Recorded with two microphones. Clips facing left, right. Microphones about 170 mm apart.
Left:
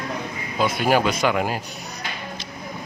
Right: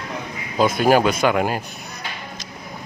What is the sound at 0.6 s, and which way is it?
Speech, 45° right (ahead or behind).